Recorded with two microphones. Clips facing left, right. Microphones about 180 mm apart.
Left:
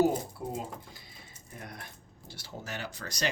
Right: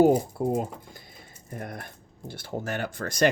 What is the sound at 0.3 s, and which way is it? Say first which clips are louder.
Speech: right 10 dB; 50° right (ahead or behind).